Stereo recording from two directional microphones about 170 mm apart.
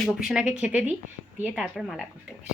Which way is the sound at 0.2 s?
5° right (ahead or behind).